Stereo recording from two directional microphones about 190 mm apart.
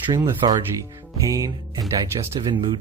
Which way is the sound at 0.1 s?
20° right (ahead or behind).